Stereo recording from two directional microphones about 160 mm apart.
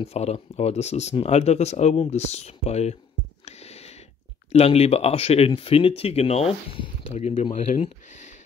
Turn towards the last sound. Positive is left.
turn(degrees=50)  # may be behind; listen again after turning